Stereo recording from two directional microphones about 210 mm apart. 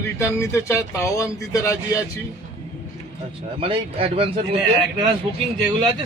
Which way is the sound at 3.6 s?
25° right (ahead or behind).